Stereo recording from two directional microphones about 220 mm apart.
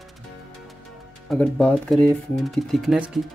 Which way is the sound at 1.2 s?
5° left (ahead or behind).